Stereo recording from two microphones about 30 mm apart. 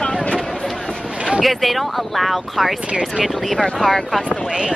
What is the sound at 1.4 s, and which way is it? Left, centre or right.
Speech, centre.